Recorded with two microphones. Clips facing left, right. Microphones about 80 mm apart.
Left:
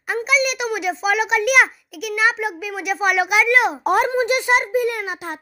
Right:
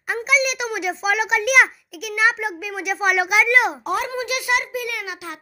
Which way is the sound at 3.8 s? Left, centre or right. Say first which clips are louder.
Left 6 dB; left.